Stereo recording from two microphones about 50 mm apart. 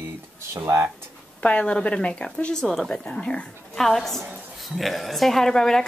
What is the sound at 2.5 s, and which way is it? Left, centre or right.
Speech, centre.